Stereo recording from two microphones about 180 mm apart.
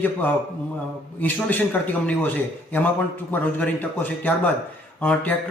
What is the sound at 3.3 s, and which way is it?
Speech, 10° left (ahead or behind).